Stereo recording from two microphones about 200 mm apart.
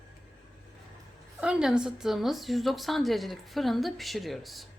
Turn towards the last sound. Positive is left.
turn(degrees=0)  # may be behind; listen again after turning